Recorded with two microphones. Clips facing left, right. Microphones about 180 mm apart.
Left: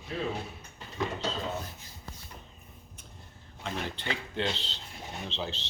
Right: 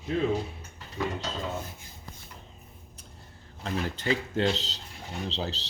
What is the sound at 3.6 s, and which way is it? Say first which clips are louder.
Speech: right 4 dB; 40° right (ahead or behind).